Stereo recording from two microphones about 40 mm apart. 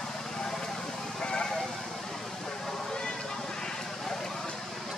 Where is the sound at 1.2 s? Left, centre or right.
Left.